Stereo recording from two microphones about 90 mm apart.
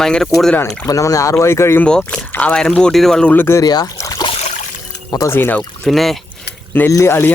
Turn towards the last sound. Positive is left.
turn(degrees=30)  # may be behind; listen again after turning